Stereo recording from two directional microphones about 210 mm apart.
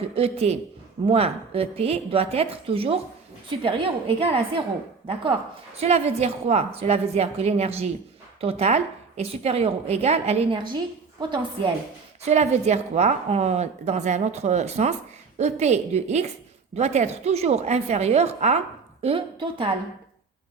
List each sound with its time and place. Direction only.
0.2 s a woman's voice: 30° right (ahead or behind)
5.7 s a woman's voice: 30° right (ahead or behind)
12.2 s a woman's voice: 30° right (ahead or behind)